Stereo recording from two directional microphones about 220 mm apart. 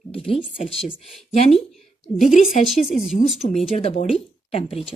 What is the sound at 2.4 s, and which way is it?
Speech, 30° left (ahead or behind).